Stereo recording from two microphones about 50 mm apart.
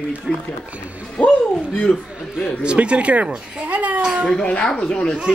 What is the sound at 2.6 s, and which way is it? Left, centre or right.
Speech, right.